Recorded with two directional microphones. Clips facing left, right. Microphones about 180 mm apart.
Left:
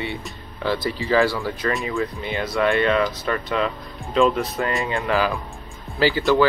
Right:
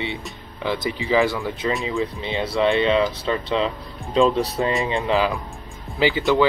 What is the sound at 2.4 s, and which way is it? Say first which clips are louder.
Speech: right 1 dB; 30° right (ahead or behind).